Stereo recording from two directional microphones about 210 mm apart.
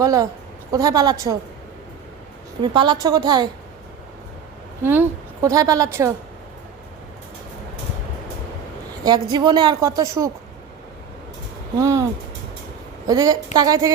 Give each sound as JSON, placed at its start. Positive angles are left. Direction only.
{"t": 0.0, "sound": "a woman's voice", "side_deg": -15}
{"t": 2.6, "sound": "a woman's voice", "side_deg": -20}
{"t": 4.8, "sound": "a woman's voice", "side_deg": -10}
{"t": 9.0, "sound": "a woman's voice", "side_deg": -20}
{"t": 11.8, "sound": "a woman's voice", "side_deg": -15}
{"t": 13.1, "sound": "a woman's voice", "side_deg": -15}